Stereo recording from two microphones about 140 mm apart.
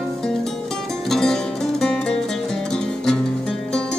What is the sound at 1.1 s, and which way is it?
Music, 5° left (ahead or behind).